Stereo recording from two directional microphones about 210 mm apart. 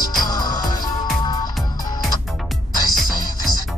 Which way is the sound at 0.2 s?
20° left (ahead or behind).